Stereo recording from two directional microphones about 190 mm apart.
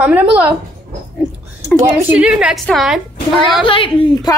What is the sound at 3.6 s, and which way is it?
Speech, 30° left (ahead or behind).